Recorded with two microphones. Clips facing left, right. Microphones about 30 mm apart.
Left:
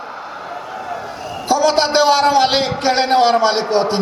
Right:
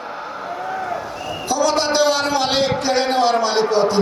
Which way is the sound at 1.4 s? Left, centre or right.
Left.